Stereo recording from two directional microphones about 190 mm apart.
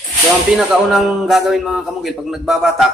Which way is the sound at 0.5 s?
Centre (ahead or behind).